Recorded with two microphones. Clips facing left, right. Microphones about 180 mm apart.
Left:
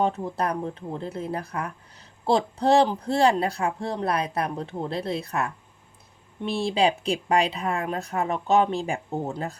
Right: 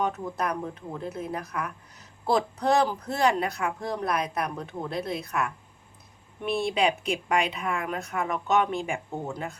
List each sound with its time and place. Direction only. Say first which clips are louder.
0.0 s speech: left 3 dB; 30° left (ahead or behind)